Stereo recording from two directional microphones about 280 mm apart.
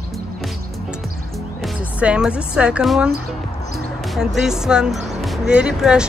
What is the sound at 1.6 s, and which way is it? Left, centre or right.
A woman's voice, centre.